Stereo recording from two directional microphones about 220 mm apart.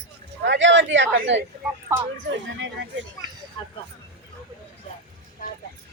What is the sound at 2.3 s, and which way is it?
Speech, 55° right (ahead or behind).